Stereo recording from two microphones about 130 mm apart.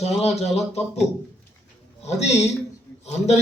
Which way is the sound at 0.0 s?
55° left (ahead or behind).